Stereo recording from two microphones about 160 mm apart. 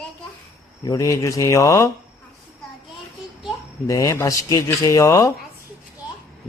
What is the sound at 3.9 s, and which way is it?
A man's voice, 20° left (ahead or behind).